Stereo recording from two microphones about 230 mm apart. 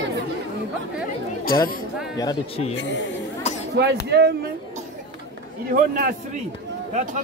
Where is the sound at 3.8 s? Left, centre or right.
Right.